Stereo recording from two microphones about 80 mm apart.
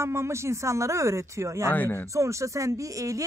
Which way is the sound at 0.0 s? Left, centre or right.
Right.